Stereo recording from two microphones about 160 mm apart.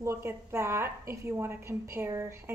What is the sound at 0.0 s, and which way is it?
A woman's voice, 15° right (ahead or behind).